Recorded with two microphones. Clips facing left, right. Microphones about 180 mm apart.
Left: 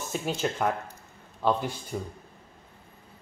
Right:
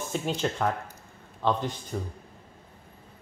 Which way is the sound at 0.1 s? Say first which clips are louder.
Even; 10° left (ahead or behind).